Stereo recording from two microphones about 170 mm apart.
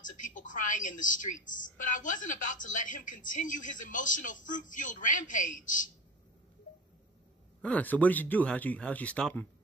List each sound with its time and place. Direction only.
0.0 s a woman's voice: 50° left (ahead or behind)
7.6 s speech: 10° left (ahead or behind)